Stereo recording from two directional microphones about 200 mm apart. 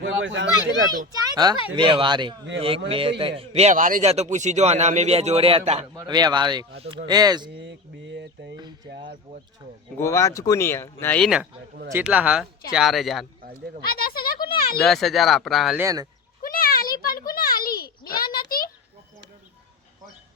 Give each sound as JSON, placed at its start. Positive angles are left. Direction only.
{"t": 0.0, "sound": "speech", "side_deg": -65}
{"t": 1.3, "sound": "a man's voice", "side_deg": -20}
{"t": 5.9, "sound": "speech", "side_deg": -20}
{"t": 7.5, "sound": "a sound", "side_deg": -65}
{"t": 10.0, "sound": "speech", "side_deg": 15}
{"t": 13.8, "sound": "speech", "side_deg": 50}
{"t": 14.4, "sound": "a sound", "side_deg": 50}
{"t": 14.8, "sound": "speech", "side_deg": 0}
{"t": 15.8, "sound": "speech", "side_deg": -15}
{"t": 16.4, "sound": "a sound", "side_deg": 45}